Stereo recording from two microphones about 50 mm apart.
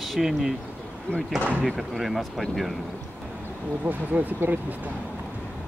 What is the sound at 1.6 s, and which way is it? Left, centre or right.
Speech, centre.